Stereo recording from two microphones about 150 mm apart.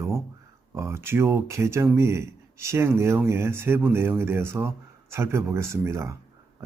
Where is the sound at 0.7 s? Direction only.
15° right (ahead or behind).